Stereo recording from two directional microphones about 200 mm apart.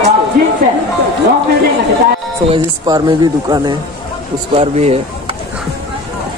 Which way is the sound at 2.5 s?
20° right (ahead or behind).